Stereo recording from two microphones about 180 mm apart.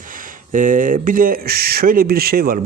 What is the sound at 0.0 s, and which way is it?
Speech, 50° right (ahead or behind).